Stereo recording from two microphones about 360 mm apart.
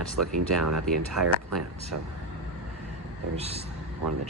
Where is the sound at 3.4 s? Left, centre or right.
Centre.